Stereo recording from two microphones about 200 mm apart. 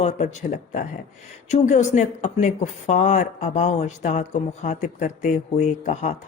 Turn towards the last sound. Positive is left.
turn(degrees=35)  # may be behind; listen again after turning